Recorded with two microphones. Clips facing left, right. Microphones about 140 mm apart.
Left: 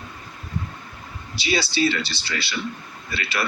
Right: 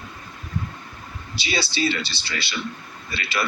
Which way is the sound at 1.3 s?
25° right (ahead or behind).